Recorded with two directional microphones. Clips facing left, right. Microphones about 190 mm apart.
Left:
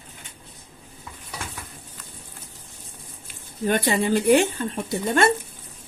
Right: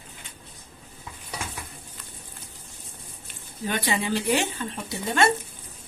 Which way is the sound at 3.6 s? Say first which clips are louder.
Left 5 dB; 50° left (ahead or behind).